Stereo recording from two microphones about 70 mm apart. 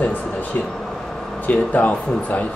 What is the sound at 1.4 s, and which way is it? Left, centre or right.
Speech, left.